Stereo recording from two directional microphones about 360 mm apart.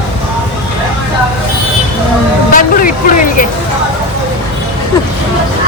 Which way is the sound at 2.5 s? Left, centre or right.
Left.